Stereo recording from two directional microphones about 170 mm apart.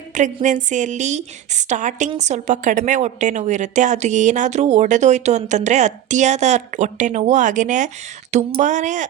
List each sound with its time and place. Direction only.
0.1 s a woman's voice: 45° right (ahead or behind)